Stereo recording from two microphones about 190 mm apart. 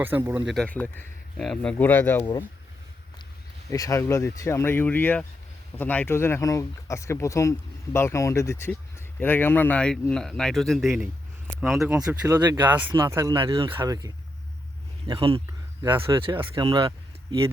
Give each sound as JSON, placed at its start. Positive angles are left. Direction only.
{"t": 0.0, "sound": "speech", "side_deg": -10}
{"t": 0.5, "sound": "speech", "side_deg": 5}
{"t": 3.7, "sound": "speech", "side_deg": 15}
{"t": 12.2, "sound": "speech", "side_deg": -20}